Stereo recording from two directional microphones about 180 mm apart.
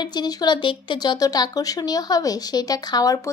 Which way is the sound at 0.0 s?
25° left (ahead or behind).